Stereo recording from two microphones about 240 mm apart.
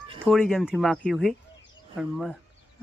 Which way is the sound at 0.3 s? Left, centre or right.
Centre.